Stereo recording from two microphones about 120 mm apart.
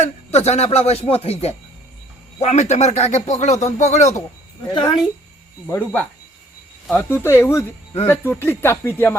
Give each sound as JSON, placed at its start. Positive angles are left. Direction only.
{"t": 0.0, "sound": "speech", "side_deg": 65}
{"t": 4.7, "sound": "a woman's voice", "side_deg": 40}
{"t": 5.6, "sound": "speech", "side_deg": 15}
{"t": 7.1, "sound": "speech", "side_deg": 20}